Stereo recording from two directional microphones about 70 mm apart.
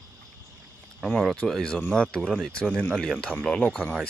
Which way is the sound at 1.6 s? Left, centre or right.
Centre.